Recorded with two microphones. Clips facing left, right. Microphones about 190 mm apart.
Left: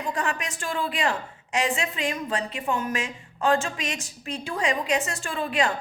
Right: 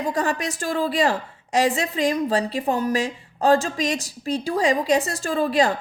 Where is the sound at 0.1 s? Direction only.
35° right (ahead or behind).